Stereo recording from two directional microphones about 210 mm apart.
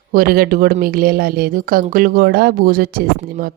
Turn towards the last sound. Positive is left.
turn(degrees=-45)  # may be behind; listen again after turning